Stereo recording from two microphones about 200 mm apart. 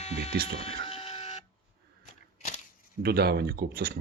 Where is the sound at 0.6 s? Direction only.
30° left (ahead or behind).